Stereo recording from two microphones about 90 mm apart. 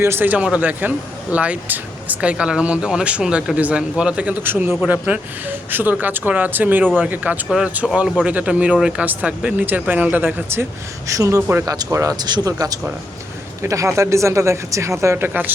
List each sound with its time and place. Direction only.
0.0 s speech: 25° right (ahead or behind)
11.1 s speech: 35° right (ahead or behind)
11.6 s speech: 40° right (ahead or behind); by 15.5 s 20° right (ahead or behind)